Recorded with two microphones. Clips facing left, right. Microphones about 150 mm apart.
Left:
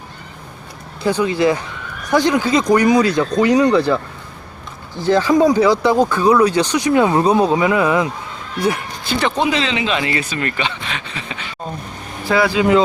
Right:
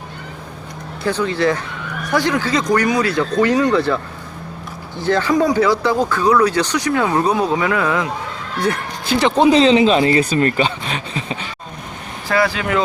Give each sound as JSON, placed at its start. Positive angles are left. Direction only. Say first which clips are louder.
{"t": 1.0, "sound": "speech", "louder": "left 2 dB", "side_deg": 15}
{"t": 5.0, "sound": "speech", "louder": "left 3 dB", "side_deg": 10}
{"t": 9.2, "sound": "speech", "louder": "right 7 dB", "side_deg": -35}
{"t": 12.3, "sound": "speech", "louder": "left 4 dB", "side_deg": 20}